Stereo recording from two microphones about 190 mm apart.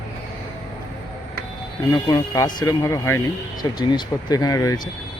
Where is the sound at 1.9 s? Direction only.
20° left (ahead or behind).